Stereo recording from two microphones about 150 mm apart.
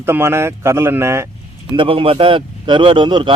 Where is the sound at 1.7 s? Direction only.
35° right (ahead or behind).